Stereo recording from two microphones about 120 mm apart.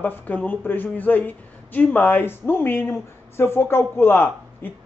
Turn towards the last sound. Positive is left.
turn(degrees=15)  # may be behind; listen again after turning